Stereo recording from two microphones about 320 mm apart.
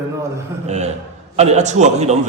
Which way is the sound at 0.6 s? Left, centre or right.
Right.